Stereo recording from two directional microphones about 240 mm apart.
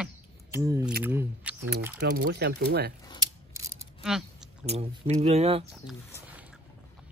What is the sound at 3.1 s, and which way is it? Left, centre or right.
Scissors, centre.